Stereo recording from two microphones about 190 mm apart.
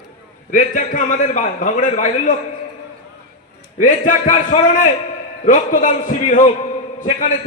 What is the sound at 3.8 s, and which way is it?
A man's voice, 40° left (ahead or behind).